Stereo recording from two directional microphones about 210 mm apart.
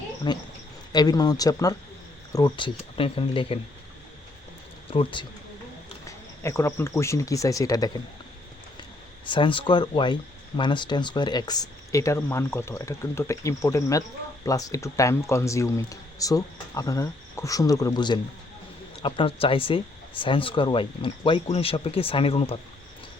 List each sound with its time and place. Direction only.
0.3 s speech: 20° left (ahead or behind)
4.9 s speech: 25° left (ahead or behind)
6.1 s speech: 15° left (ahead or behind)
9.2 s speech: 20° left (ahead or behind)